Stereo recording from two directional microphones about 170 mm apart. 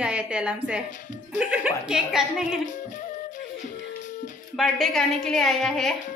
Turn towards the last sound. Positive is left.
turn(degrees=0)  # may be behind; listen again after turning